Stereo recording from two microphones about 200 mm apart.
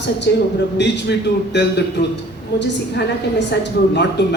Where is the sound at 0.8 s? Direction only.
60° left (ahead or behind).